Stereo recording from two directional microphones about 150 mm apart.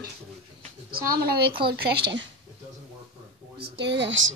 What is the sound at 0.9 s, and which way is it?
Speech, 85° right.